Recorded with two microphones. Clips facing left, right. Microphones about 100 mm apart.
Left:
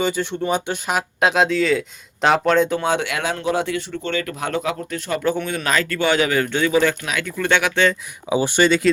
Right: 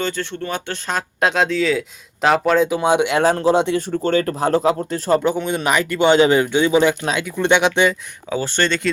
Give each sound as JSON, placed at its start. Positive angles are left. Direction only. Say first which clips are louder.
{"t": 0.0, "sound": "speech", "louder": "left 3 dB", "side_deg": 15}
{"t": 2.8, "sound": "speech", "louder": "right 5 dB", "side_deg": -20}
{"t": 3.2, "sound": "a man's voice", "louder": "right 7 dB", "side_deg": -35}
{"t": 3.8, "sound": "speech", "louder": "right 6 dB", "side_deg": -40}
{"t": 5.2, "sound": "a man's voice", "louder": "right 2 dB", "side_deg": -20}
{"t": 8.3, "sound": "speech", "louder": "left 4 dB", "side_deg": 15}